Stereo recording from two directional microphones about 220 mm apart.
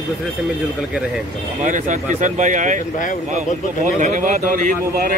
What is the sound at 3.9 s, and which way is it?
Speech, 35° right (ahead or behind).